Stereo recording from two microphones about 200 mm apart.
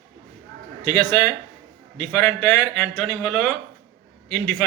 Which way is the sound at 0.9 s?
10° left (ahead or behind).